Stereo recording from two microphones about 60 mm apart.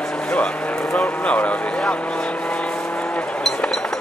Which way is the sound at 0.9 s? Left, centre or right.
Left.